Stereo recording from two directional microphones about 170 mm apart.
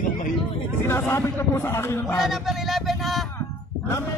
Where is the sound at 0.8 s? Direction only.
15° left (ahead or behind).